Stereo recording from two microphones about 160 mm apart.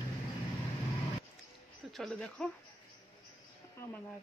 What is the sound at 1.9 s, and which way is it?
Speech, centre (ahead or behind).